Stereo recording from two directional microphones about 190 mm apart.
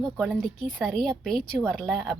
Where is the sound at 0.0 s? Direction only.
Centre (ahead or behind).